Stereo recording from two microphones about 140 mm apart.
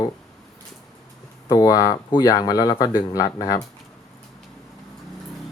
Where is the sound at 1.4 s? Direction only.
25° left (ahead or behind).